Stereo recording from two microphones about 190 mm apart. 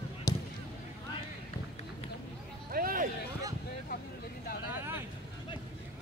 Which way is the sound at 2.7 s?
50° right (ahead or behind).